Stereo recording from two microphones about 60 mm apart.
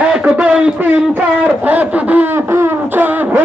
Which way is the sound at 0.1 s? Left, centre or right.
Centre.